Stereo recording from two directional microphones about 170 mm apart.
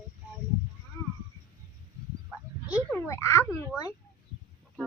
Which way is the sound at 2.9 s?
15° left (ahead or behind).